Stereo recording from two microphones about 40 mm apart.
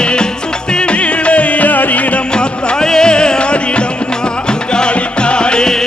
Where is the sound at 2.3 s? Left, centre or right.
Centre.